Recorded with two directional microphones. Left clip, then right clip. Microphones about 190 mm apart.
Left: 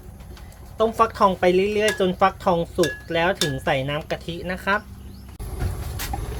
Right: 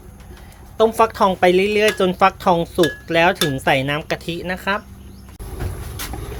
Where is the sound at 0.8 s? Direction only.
30° right (ahead or behind).